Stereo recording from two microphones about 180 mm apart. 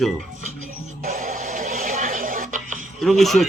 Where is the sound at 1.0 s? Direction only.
45° right (ahead or behind).